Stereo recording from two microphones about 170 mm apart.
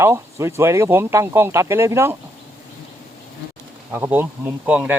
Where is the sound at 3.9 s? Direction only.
10° right (ahead or behind).